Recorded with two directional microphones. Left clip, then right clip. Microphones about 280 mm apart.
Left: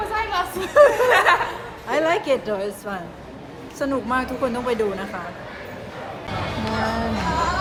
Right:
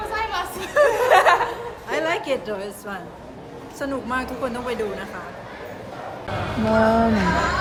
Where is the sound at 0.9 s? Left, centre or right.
Right.